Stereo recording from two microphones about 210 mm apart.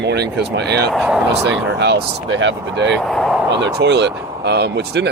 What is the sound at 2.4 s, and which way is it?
Speech, 60° right (ahead or behind).